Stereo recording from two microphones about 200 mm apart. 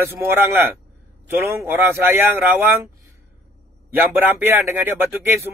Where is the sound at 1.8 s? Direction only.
10° right (ahead or behind).